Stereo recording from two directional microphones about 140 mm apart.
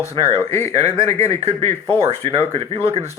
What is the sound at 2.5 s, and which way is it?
Speech, 45° right (ahead or behind).